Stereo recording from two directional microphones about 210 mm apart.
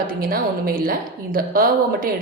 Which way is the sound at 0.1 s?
45° right (ahead or behind).